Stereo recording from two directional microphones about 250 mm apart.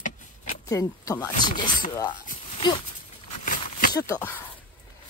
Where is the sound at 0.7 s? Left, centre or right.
Centre.